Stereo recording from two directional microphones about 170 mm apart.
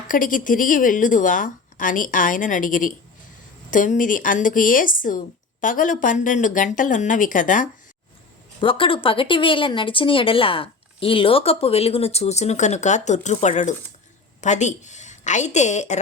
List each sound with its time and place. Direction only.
0.1 s a woman's voice: 50° left (ahead or behind)
8.6 s a woman's voice: 30° left (ahead or behind)